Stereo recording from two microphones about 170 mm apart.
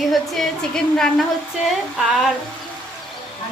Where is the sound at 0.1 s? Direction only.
Centre (ahead or behind).